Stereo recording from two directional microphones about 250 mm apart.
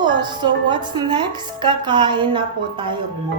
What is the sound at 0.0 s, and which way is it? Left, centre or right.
A woman's voice, centre.